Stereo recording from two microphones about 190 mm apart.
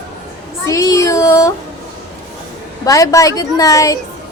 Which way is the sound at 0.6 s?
15° left (ahead or behind).